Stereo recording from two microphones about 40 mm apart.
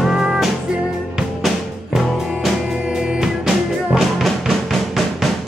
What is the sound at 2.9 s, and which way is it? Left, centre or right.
Music, centre.